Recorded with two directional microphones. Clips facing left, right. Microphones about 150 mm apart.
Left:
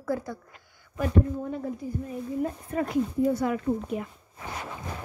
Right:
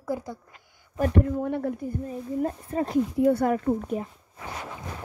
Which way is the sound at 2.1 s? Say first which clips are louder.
Right 1 dB; 30° right (ahead or behind).